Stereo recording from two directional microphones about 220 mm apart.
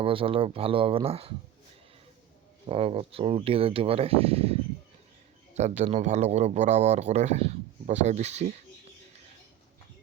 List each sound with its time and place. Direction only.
0.0 s speech: 25° right (ahead or behind)
2.6 s speech: 25° right (ahead or behind)